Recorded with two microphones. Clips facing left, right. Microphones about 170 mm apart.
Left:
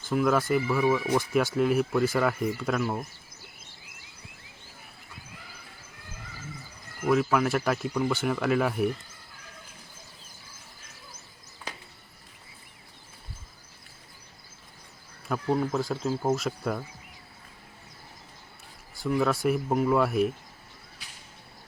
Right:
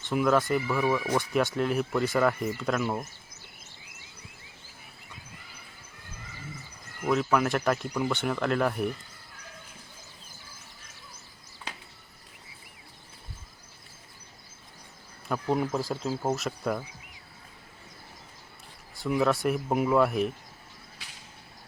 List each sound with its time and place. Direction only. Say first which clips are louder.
0.0 s speech: even; centre (ahead or behind)
7.1 s speech: left 1 dB; centre (ahead or behind)
15.3 s speech: left 1 dB; centre (ahead or behind)
18.9 s speech: even; centre (ahead or behind)